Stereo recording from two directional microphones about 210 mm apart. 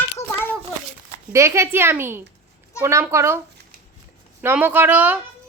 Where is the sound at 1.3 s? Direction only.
15° right (ahead or behind).